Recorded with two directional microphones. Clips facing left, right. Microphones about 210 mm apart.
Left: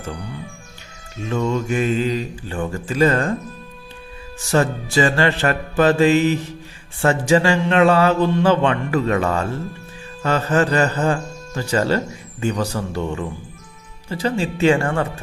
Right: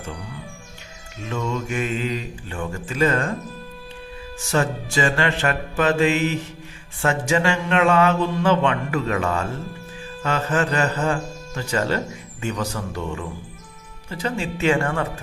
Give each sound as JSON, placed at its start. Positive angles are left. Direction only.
{"t": 1.3, "sound": "mantra", "side_deg": 35}
{"t": 4.5, "sound": "mantra", "side_deg": 35}
{"t": 14.1, "sound": "mantra", "side_deg": 30}